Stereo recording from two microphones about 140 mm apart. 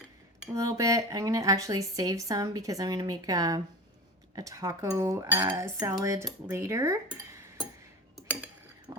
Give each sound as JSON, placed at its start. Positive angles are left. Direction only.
{"t": 0.5, "sound": "speech", "side_deg": -25}
{"t": 8.9, "sound": "vehicle", "side_deg": -30}